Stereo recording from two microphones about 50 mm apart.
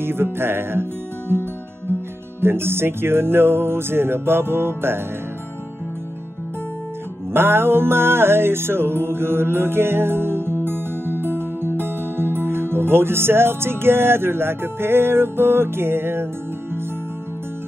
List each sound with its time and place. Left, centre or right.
0.0 s music: right
2.4 s music: right
7.3 s music: right